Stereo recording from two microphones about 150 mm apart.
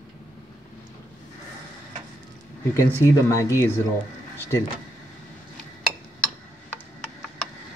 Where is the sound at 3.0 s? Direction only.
20° left (ahead or behind).